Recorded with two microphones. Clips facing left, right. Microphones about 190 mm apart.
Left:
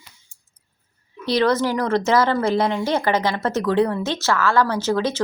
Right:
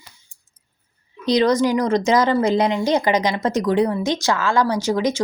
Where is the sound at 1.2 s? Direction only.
15° right (ahead or behind).